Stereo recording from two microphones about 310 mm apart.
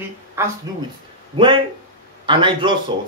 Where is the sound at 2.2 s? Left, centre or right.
Centre.